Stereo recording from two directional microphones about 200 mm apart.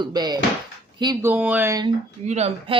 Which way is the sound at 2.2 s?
35° right (ahead or behind).